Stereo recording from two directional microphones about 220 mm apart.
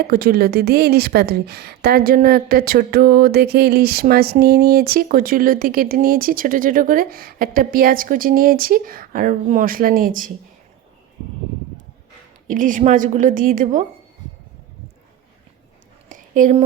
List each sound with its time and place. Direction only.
0.1 s a woman's voice: 45° right (ahead or behind)
12.5 s a woman's voice: 35° right (ahead or behind)
16.0 s a sound: 35° right (ahead or behind)